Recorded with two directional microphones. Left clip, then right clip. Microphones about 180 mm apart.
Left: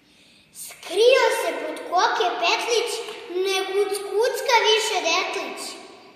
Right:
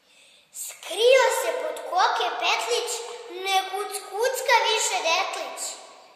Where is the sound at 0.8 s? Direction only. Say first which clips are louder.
Left 1 dB; 25° right (ahead or behind).